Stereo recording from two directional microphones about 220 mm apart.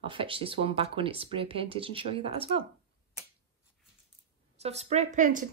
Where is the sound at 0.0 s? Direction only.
25° right (ahead or behind).